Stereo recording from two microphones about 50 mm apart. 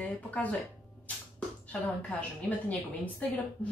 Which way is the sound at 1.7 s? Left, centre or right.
Left.